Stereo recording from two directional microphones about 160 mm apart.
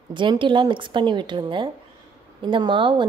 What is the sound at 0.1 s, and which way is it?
A woman's voice, 30° right (ahead or behind).